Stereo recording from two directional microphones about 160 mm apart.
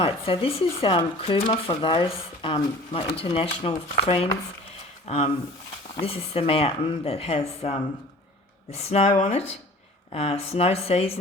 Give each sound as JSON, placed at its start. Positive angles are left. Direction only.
{"t": 0.0, "sound": "speech", "side_deg": 35}